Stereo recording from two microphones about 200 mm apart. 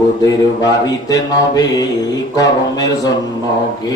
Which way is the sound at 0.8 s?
20° left (ahead or behind).